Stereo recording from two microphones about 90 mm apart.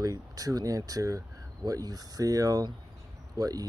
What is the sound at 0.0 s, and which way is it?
Speech, 40° right (ahead or behind).